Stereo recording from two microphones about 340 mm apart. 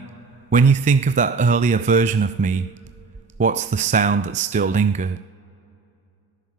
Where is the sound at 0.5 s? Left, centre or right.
Right.